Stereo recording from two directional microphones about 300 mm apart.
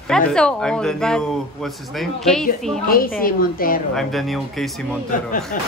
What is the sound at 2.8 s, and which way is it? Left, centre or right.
Speech, left.